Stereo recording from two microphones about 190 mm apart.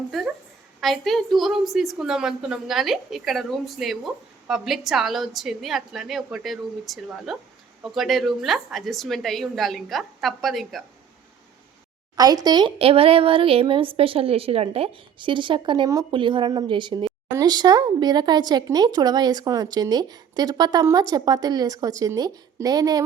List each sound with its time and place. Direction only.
0.1 s a woman's voice: centre (ahead or behind)
12.1 s speech: 20° right (ahead or behind)